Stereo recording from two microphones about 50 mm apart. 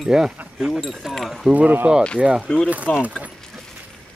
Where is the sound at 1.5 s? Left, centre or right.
Right.